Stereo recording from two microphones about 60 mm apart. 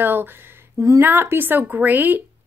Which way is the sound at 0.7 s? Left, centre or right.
Right.